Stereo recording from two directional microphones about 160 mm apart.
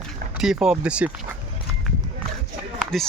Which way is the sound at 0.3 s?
5° right (ahead or behind).